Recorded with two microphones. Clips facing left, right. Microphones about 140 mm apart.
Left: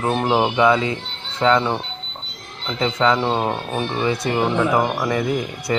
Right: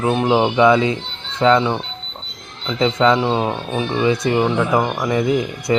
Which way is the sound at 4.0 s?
15° right (ahead or behind).